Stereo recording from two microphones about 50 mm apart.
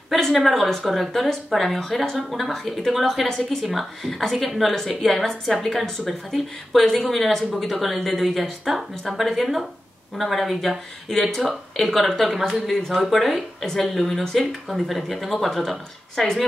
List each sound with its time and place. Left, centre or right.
0.2 s speech: centre